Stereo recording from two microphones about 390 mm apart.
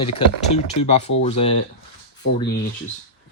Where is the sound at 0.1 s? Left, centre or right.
Centre.